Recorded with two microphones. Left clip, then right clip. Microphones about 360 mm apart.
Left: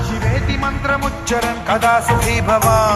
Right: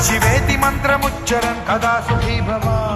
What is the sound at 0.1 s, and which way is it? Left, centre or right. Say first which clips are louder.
Music: right 5 dB; right.